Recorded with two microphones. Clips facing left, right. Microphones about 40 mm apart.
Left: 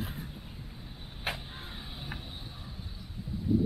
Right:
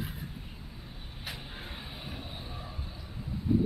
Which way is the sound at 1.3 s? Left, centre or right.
Left.